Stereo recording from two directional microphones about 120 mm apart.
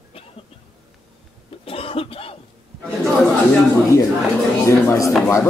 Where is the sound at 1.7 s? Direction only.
50° left (ahead or behind).